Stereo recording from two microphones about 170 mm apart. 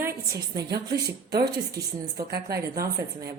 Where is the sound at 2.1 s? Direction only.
65° right (ahead or behind).